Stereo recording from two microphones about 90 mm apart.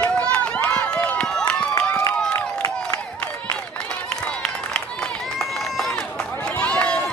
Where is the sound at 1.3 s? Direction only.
10° left (ahead or behind).